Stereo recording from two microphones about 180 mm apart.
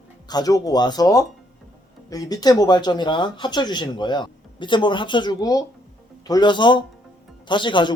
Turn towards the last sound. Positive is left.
turn(degrees=25)  # may be behind; listen again after turning